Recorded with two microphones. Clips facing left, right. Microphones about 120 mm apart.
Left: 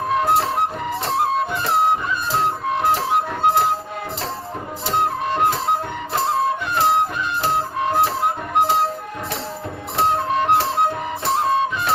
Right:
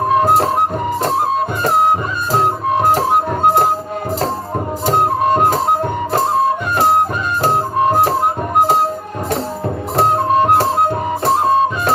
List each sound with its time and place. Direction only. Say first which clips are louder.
0.2 s music: right 3 dB; 45° right (ahead or behind)
1.6 s music: right 5 dB; 45° right (ahead or behind)
4.9 s music: right 7 dB; 45° right (ahead or behind)
10.0 s music: right 6 dB; 45° right (ahead or behind)